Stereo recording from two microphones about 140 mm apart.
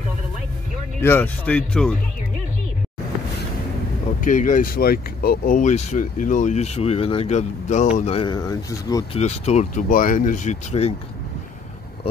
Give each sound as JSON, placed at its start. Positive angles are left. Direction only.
{"t": 1.0, "sound": "speech", "side_deg": 15}
{"t": 4.2, "sound": "speech", "side_deg": 70}
{"t": 8.1, "sound": "speech", "side_deg": 35}
{"t": 9.1, "sound": "speech", "side_deg": 50}
{"t": 9.8, "sound": "speech", "side_deg": 75}